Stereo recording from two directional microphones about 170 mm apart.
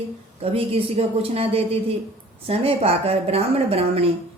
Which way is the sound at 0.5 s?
35° right (ahead or behind).